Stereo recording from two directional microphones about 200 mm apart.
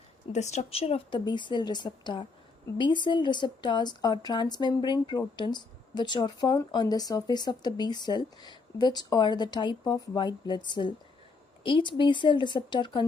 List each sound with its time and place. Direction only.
0.3 s speech: 35° left (ahead or behind)